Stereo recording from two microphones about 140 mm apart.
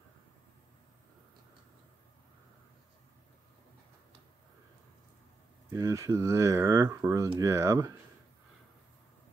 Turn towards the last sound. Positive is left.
turn(degrees=-25)  # may be behind; listen again after turning